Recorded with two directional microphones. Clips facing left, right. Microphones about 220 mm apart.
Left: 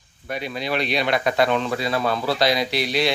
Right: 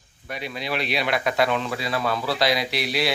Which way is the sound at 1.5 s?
30° left (ahead or behind).